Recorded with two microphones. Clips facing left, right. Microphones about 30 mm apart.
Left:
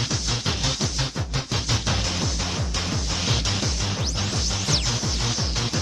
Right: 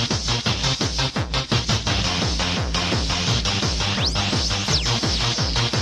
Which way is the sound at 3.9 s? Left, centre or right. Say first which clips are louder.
Right 5 dB; right.